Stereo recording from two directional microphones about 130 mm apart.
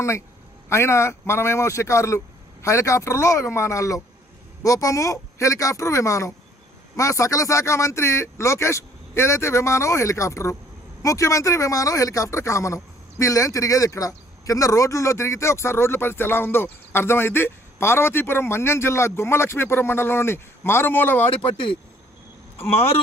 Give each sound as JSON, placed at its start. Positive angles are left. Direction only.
{"t": 0.7, "sound": "speech", "side_deg": 20}